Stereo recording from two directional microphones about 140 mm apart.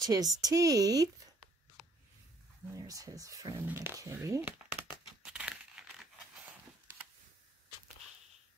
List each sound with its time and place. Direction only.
0.0 s a woman's voice: 25° right (ahead or behind)
2.7 s a woman's voice: 25° right (ahead or behind)
3.6 s speech: 15° right (ahead or behind)
5.2 s crumpling: 5° right (ahead or behind)